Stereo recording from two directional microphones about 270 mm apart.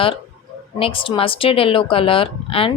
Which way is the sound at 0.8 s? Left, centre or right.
Centre.